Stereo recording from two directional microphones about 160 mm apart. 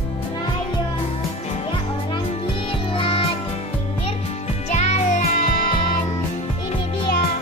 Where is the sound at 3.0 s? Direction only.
35° left (ahead or behind).